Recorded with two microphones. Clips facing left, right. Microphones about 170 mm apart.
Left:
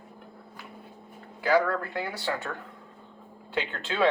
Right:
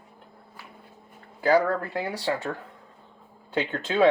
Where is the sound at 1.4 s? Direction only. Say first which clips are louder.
Right 3 dB; 40° right (ahead or behind).